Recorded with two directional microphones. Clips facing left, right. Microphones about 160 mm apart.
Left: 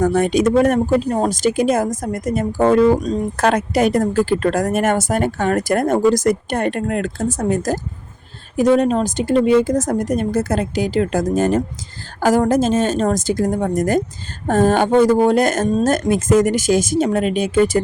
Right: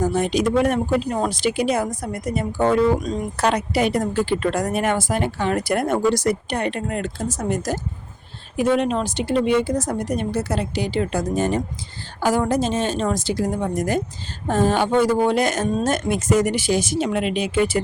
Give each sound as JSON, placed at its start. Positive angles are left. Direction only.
{"t": 0.0, "sound": "speech", "side_deg": 60}
{"t": 3.4, "sound": "speech", "side_deg": 45}
{"t": 8.5, "sound": "speech", "side_deg": 40}